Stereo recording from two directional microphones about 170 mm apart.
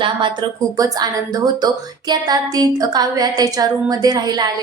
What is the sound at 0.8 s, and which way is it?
Speech, 25° right (ahead or behind).